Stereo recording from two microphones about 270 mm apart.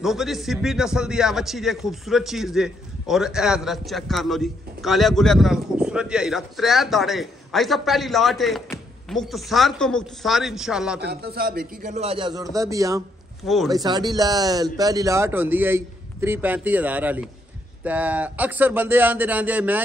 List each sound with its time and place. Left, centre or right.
0.0 s a man's voice: centre
11.0 s a man's voice: right
12.5 s a man's voice: centre